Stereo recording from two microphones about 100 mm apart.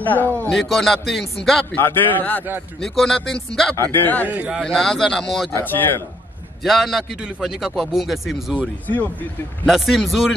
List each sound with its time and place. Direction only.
0.0 s speech: 15° left (ahead or behind)
0.5 s a man's voice: centre (ahead or behind)
1.8 s a man's voice: 20° left (ahead or behind)
2.8 s a man's voice: 5° left (ahead or behind)
3.7 s a man's voice: 20° left (ahead or behind)
4.6 s a man's voice: 5° left (ahead or behind)
6.6 s a man's voice: centre (ahead or behind)
8.8 s speech: 15° left (ahead or behind)
9.7 s a man's voice: centre (ahead or behind)